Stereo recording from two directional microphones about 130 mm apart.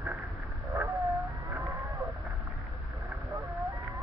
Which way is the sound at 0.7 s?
25° right (ahead or behind).